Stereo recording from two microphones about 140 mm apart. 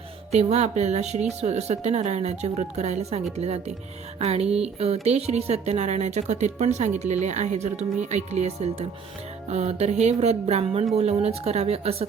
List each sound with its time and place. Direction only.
0.3 s speech: 50° right (ahead or behind)